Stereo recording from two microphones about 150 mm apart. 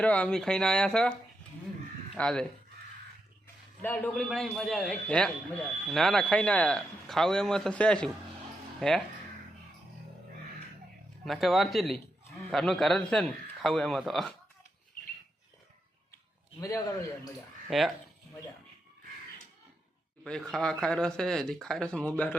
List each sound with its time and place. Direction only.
0.0 s speech: 10° left (ahead or behind)
2.1 s a man's voice: 5° left (ahead or behind)
3.8 s a man's voice: 10° left (ahead or behind)
11.3 s speech: centre (ahead or behind)
16.6 s a man's voice: 25° left (ahead or behind)
17.7 s speech: centre (ahead or behind)
20.2 s speech: 5° left (ahead or behind)